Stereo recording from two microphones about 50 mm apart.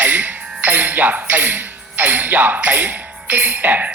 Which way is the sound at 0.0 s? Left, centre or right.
Right.